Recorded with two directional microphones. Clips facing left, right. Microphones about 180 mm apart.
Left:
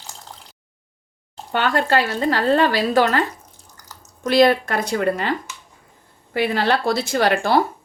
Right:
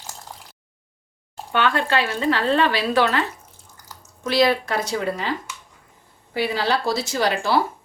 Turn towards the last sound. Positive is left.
turn(degrees=55)  # may be behind; listen again after turning